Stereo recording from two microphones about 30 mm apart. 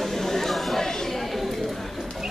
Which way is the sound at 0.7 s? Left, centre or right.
Centre.